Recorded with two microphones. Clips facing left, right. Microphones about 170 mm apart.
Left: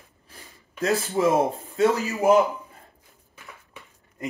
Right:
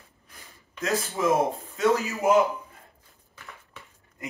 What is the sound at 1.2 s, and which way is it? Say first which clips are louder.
Speech: left 4 dB; 30° left (ahead or behind).